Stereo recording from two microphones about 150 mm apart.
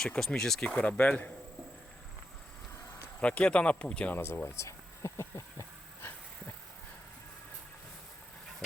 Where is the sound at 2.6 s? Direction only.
15° left (ahead or behind).